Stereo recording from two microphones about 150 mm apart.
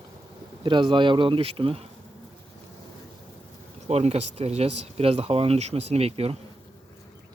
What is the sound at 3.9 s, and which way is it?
Speech, 45° right (ahead or behind).